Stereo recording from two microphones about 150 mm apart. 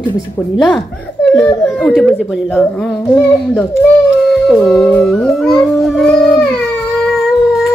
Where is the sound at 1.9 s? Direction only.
Centre (ahead or behind).